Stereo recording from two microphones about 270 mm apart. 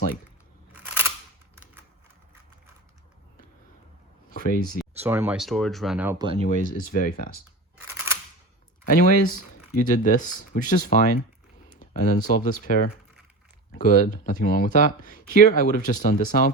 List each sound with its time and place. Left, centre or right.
0.7 s single-lens reflex camera: centre
4.3 s a sound: left
4.8 s speech: centre
6.4 s speech: left
7.9 s a sound: centre
8.9 s speech: left